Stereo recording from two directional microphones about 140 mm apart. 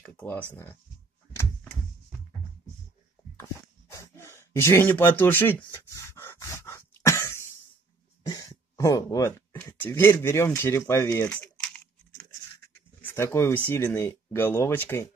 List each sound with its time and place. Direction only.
0.0 s speech: 15° left (ahead or behind)
3.9 s a sound: 20° left (ahead or behind)
8.3 s throat clearing: 25° left (ahead or behind)
9.8 s speech: 15° left (ahead or behind)
11.2 s typing: 5° left (ahead or behind)
13.0 s speech: 20° left (ahead or behind)